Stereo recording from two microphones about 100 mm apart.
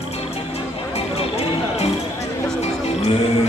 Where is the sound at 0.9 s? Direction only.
90° left.